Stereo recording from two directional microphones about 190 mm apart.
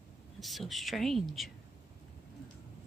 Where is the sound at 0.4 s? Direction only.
Centre (ahead or behind).